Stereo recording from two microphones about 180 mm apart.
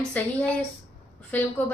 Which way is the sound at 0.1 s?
10° left (ahead or behind).